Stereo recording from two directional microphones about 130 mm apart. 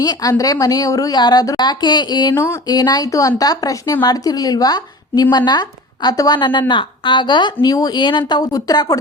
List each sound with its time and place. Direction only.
0.0 s a woman's voice: 30° left (ahead or behind)
2.3 s a woman's voice: 20° left (ahead or behind)
2.6 s a woman's voice: 30° left (ahead or behind)